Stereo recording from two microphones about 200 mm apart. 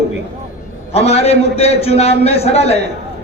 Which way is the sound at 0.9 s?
30° left (ahead or behind).